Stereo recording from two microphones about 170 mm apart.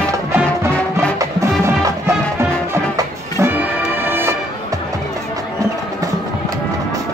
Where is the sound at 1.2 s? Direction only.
20° right (ahead or behind).